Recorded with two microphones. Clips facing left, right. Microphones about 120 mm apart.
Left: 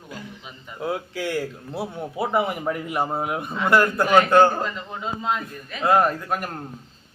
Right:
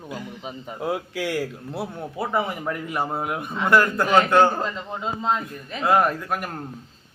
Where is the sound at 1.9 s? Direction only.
10° left (ahead or behind).